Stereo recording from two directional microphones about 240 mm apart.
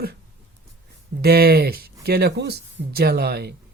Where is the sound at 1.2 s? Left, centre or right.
Right.